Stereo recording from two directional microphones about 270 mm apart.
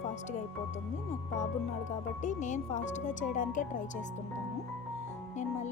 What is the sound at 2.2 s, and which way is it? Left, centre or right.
Speech, left.